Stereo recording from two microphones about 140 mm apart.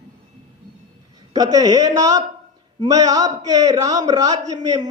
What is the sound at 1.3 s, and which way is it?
A man's voice, 25° right (ahead or behind).